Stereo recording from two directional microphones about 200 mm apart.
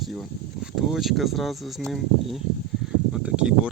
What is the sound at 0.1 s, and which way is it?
Speech, centre (ahead or behind).